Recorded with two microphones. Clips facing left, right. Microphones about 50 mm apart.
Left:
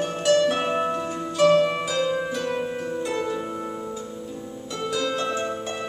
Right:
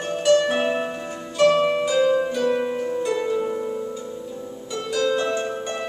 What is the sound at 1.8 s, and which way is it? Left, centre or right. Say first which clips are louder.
Harp: right 5 dB; centre.